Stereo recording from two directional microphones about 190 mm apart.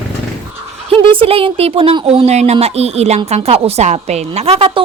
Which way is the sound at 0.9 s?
25° right (ahead or behind).